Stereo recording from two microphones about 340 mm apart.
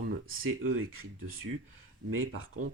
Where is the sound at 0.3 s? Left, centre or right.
Right.